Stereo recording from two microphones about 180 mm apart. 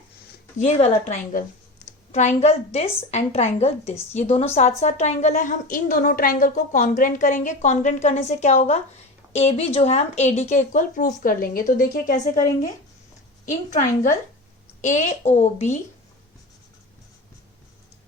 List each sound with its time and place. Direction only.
0.6 s a woman's voice: 35° left (ahead or behind)